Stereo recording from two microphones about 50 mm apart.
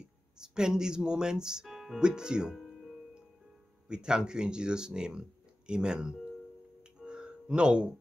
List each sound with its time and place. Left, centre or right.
0.4 s speech: centre
1.7 s music: centre
2.0 s speech: centre
2.5 s music: centre
3.9 s speech: centre
6.8 s music: centre